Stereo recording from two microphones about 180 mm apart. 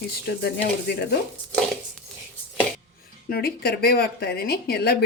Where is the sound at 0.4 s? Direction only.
70° left (ahead or behind).